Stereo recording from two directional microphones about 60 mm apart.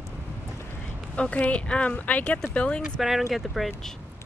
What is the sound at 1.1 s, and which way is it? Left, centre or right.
Speech, left.